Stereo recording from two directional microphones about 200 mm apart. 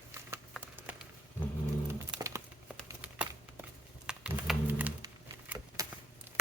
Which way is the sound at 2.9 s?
10° right (ahead or behind).